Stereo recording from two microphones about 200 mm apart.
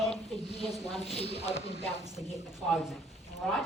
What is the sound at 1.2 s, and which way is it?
Speech, 30° left (ahead or behind).